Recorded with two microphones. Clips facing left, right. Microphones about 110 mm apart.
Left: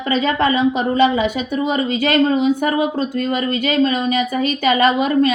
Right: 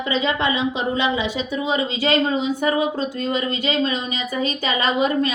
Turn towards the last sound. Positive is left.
turn(degrees=50)  # may be behind; listen again after turning